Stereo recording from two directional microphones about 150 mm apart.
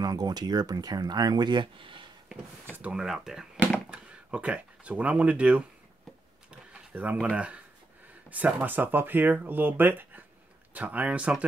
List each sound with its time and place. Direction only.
0.0 s speech: 25° right (ahead or behind)
2.7 s speech: 5° right (ahead or behind)
6.7 s speech: 10° right (ahead or behind)